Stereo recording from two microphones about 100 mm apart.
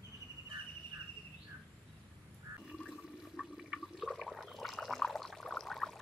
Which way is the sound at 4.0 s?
Centre (ahead or behind).